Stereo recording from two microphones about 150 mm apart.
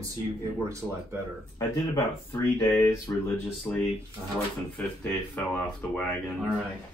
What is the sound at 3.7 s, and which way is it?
Speech, 10° left (ahead or behind).